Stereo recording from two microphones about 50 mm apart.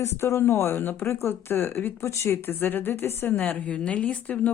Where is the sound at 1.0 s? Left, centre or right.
Left.